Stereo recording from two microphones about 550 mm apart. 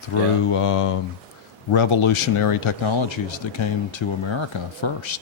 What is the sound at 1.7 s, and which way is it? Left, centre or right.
Speech, left.